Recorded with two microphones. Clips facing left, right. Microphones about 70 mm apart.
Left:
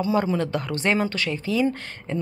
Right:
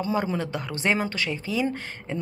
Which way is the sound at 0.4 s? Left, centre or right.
Centre.